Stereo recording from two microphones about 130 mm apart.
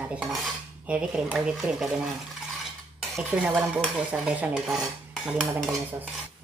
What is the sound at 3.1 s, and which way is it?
Speech, 10° right (ahead or behind).